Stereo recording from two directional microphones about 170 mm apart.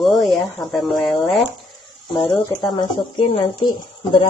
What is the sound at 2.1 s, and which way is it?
Speech, 30° left (ahead or behind).